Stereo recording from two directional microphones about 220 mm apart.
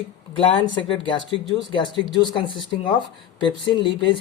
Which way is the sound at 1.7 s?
20° left (ahead or behind).